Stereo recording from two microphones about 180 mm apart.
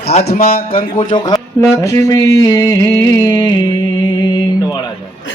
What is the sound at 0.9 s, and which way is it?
Music, 25° left (ahead or behind).